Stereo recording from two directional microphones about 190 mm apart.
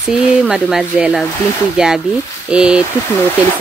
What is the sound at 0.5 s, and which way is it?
Speech, centre (ahead or behind).